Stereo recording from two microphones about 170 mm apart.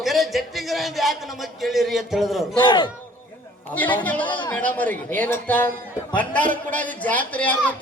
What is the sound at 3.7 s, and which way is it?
Speech, 10° left (ahead or behind).